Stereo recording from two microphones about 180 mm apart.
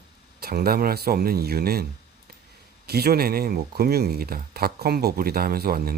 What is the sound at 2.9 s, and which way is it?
Speech, 60° right (ahead or behind).